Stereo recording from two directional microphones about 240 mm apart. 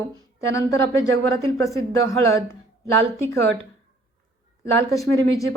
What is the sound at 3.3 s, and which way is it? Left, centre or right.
Speech, right.